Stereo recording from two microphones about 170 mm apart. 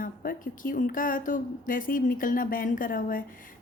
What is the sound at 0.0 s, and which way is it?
A woman's voice, 55° left (ahead or behind).